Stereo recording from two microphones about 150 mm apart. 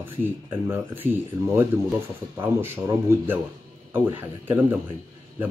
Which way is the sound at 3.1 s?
15° right (ahead or behind).